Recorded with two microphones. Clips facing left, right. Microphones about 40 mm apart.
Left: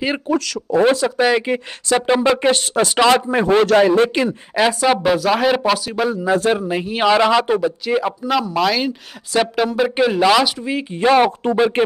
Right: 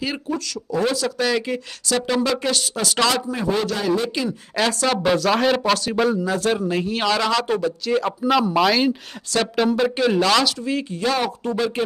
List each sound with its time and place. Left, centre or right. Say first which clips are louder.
0.7 s speech: left 7 dB; left
3.3 s a man's voice: left 8 dB; left
4.6 s speech: left 5 dB; centre
6.2 s speech: left 4 dB; left
8.5 s speech: even; centre
10.9 s speech: left 12 dB; left